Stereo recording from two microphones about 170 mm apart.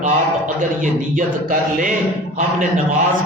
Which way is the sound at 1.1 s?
50° right (ahead or behind).